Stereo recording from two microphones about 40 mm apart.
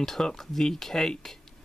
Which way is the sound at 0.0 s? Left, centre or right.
Centre.